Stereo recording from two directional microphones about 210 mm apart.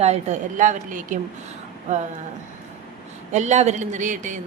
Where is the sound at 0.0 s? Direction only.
30° right (ahead or behind).